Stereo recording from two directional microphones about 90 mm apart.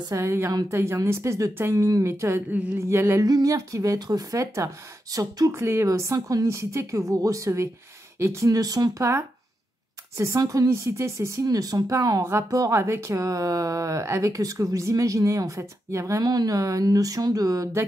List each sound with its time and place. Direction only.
0.1 s speech: 30° right (ahead or behind)
3.3 s speech: 45° right (ahead or behind)
5.5 s speech: 30° right (ahead or behind)